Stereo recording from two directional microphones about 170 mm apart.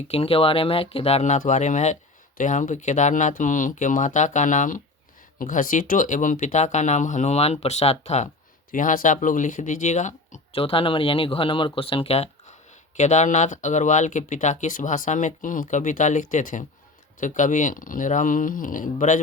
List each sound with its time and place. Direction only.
0.1 s speech: 35° left (ahead or behind)
8.7 s speech: 50° left (ahead or behind)
10.6 s speech: 30° left (ahead or behind); by 19.2 s 50° left (ahead or behind)